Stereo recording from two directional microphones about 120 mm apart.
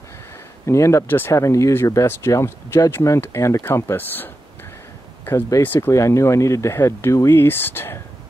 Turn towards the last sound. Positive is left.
turn(degrees=20)  # may be behind; listen again after turning